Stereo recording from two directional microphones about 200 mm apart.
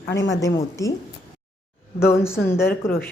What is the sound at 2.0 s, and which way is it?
Speech, 15° left (ahead or behind).